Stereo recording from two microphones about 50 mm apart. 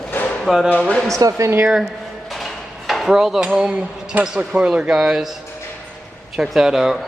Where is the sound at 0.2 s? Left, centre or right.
Left.